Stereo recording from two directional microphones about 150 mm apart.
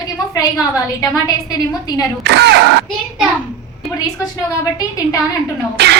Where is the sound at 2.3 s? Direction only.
90° right.